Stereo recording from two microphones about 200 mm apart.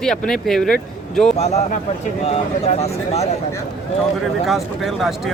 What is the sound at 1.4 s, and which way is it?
Speech, 35° left (ahead or behind).